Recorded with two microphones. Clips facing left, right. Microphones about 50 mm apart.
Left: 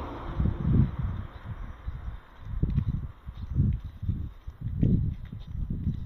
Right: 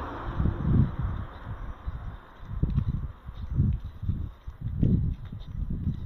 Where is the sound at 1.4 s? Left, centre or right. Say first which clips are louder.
Right 2 dB; right.